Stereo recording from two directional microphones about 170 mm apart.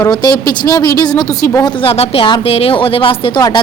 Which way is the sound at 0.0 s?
20° left (ahead or behind).